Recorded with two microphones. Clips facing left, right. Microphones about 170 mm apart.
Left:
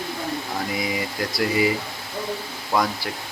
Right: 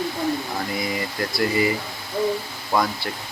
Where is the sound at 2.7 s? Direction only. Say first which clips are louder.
Even; 5° left (ahead or behind).